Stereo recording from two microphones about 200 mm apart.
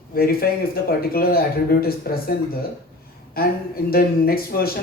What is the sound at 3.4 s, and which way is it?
Speech, 50° left (ahead or behind).